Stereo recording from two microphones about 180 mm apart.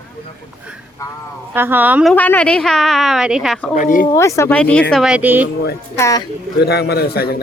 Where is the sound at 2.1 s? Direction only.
10° left (ahead or behind).